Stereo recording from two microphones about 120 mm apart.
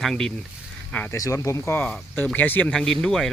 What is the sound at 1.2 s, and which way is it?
Speech, 25° left (ahead or behind).